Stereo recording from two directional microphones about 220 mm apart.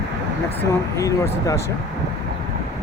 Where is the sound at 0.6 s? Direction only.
15° left (ahead or behind).